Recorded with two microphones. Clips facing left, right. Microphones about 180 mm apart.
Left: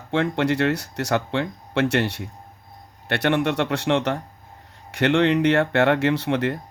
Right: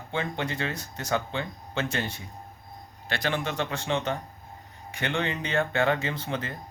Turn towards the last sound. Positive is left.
turn(degrees=70)  # may be behind; listen again after turning